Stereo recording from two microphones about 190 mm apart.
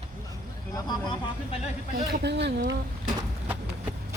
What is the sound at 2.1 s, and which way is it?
Speech, 60° right (ahead or behind).